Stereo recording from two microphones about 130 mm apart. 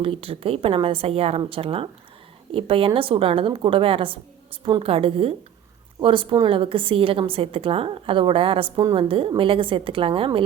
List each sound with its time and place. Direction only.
0.0 s a woman's voice: 45° right (ahead or behind)
8.7 s a woman's voice: 25° right (ahead or behind)
9.0 s a woman's voice: 45° right (ahead or behind)